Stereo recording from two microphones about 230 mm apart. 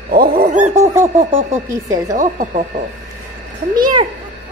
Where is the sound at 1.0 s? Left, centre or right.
Centre.